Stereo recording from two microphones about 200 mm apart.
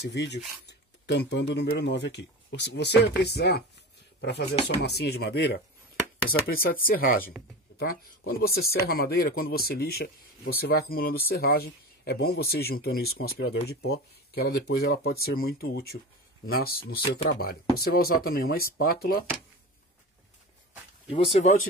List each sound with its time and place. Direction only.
0.0 s speech: 60° left (ahead or behind)
4.5 s speech: 30° left (ahead or behind)
4.8 s speech: 55° left (ahead or behind)
6.5 s speech: 45° left (ahead or behind)
8.3 s speech: 50° left (ahead or behind)
21.1 s speech: 30° left (ahead or behind)